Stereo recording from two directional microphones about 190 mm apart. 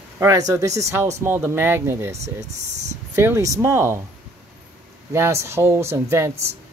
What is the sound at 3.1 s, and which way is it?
Speech, 15° right (ahead or behind).